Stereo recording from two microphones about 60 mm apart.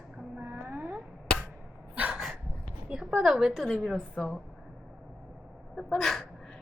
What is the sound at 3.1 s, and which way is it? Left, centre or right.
Speech, centre.